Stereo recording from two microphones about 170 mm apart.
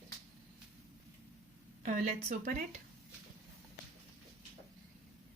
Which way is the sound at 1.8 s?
45° right (ahead or behind).